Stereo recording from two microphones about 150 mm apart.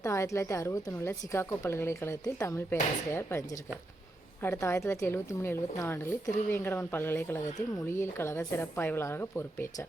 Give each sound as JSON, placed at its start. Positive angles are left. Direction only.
{"t": 0.0, "sound": "a woman's voice", "side_deg": 20}
{"t": 4.4, "sound": "speech", "side_deg": 15}